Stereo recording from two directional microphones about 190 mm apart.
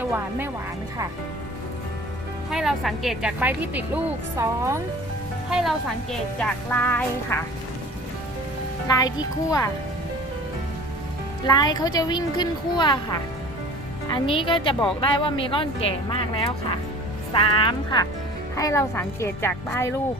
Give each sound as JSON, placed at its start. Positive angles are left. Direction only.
{"t": 0.0, "sound": "speech", "side_deg": -10}
{"t": 2.5, "sound": "a woman's voice", "side_deg": 0}
{"t": 5.5, "sound": "a woman's voice", "side_deg": 0}
{"t": 9.0, "sound": "speech", "side_deg": 20}
{"t": 11.4, "sound": "a woman's voice", "side_deg": 20}